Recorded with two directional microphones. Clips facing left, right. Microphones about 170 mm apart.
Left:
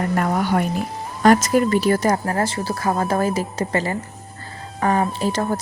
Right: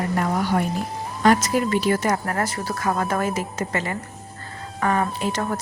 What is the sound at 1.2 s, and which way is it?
A woman's voice, 45° left (ahead or behind).